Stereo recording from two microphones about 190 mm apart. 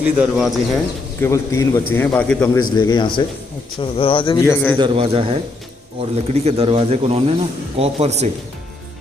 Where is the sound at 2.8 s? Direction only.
25° left (ahead or behind).